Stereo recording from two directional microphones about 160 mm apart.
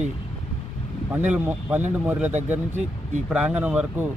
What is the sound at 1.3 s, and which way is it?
Speech, 10° right (ahead or behind).